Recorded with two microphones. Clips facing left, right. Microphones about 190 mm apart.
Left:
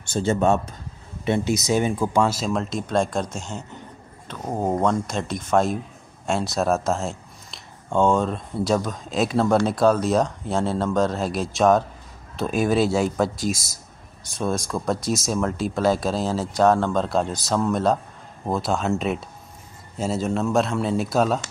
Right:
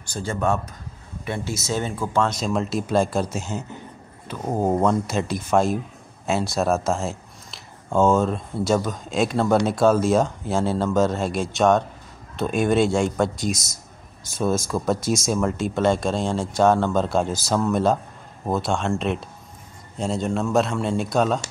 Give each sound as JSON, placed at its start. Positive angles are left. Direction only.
{"t": 0.0, "sound": "a man's voice", "side_deg": 25}